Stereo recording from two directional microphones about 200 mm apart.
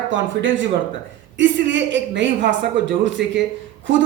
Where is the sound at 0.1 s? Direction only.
70° right (ahead or behind).